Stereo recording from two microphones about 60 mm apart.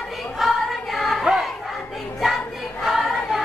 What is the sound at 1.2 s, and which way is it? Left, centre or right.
Battle cry, centre.